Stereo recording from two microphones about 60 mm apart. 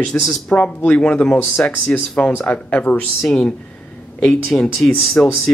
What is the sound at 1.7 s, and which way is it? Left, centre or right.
Speech, left.